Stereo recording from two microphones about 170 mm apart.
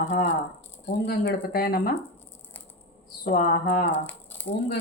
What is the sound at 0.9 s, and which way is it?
Speech, 70° left (ahead or behind).